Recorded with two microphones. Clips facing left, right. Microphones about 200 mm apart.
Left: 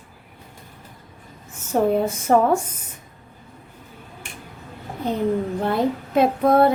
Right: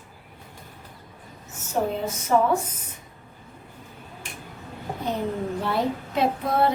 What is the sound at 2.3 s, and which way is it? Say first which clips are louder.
Speech: left 4 dB; 55° left (ahead or behind).